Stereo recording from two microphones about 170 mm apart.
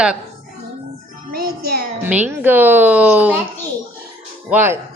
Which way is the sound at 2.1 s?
10° right (ahead or behind).